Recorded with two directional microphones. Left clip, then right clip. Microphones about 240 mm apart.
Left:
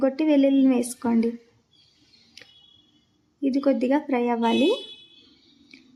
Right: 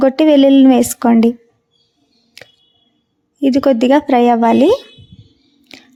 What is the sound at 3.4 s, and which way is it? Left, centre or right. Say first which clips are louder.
Speech: right 11 dB; right.